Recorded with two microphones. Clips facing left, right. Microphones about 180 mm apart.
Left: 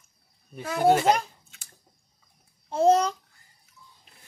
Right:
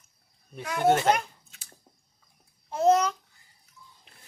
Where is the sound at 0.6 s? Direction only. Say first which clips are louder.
Left 2 dB; 35° left (ahead or behind).